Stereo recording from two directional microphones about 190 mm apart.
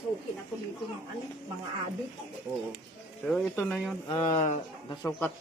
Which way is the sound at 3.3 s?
5° left (ahead or behind).